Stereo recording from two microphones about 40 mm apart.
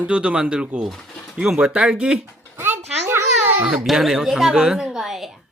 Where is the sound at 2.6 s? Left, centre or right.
Right.